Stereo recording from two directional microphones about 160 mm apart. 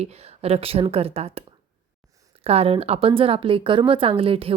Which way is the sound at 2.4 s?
40° right (ahead or behind).